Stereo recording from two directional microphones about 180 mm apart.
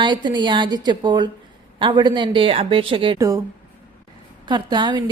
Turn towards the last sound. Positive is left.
turn(degrees=-25)  # may be behind; listen again after turning